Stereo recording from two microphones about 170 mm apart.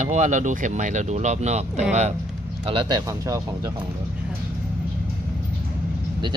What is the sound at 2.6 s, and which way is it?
Speech, 30° right (ahead or behind).